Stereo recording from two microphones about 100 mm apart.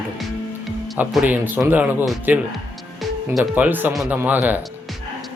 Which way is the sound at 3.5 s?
20° right (ahead or behind).